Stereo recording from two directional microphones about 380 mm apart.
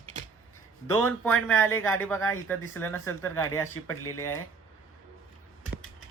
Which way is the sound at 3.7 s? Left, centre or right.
Left.